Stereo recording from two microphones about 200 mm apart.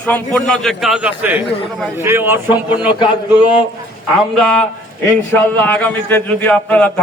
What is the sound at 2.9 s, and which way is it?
Speech, 25° left (ahead or behind).